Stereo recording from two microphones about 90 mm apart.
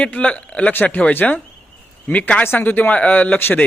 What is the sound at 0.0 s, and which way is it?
A man's voice, 15° left (ahead or behind).